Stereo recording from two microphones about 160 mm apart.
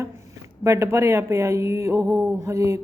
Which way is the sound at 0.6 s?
20° right (ahead or behind).